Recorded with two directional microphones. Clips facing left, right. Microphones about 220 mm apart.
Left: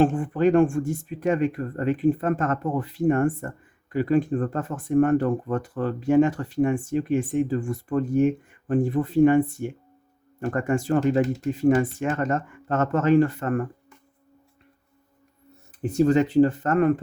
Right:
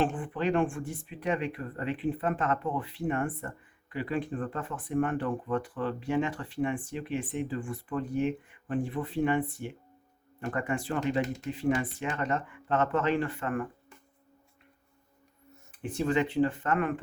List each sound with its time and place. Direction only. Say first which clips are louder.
0.0 s speech: left 9 dB; 45° left (ahead or behind)
15.8 s speech: left 9 dB; 40° left (ahead or behind)